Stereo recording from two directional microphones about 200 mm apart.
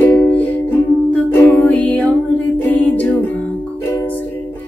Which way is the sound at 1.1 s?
10° left (ahead or behind).